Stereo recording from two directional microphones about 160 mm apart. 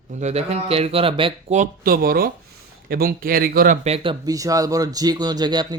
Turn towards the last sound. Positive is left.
turn(degrees=-25)  # may be behind; listen again after turning